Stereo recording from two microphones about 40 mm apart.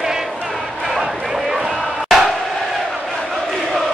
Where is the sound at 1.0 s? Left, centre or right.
Centre.